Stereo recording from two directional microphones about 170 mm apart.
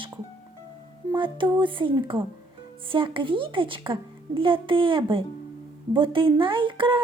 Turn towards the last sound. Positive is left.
turn(degrees=-30)  # may be behind; listen again after turning